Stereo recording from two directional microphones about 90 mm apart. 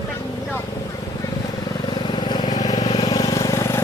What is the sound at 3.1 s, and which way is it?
Vehicle, 45° left (ahead or behind).